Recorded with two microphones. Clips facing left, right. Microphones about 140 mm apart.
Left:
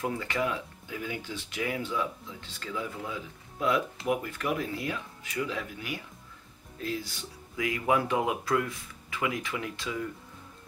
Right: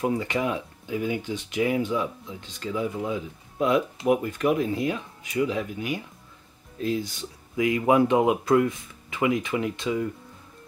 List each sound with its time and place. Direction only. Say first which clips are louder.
0.0 s speech: right 5 dB; 20° right (ahead or behind)